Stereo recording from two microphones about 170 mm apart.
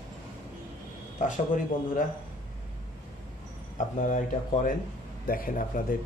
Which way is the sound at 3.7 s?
45° left (ahead or behind).